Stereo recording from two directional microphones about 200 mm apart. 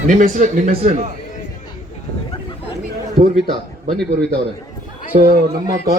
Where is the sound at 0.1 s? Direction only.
40° right (ahead or behind).